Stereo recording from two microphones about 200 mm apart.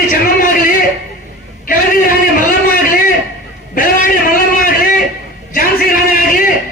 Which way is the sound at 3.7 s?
45° left (ahead or behind).